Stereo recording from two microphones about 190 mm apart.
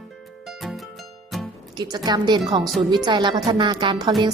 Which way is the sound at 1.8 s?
20° right (ahead or behind).